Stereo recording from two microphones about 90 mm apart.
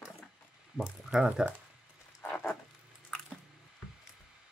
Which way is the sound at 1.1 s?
5° right (ahead or behind).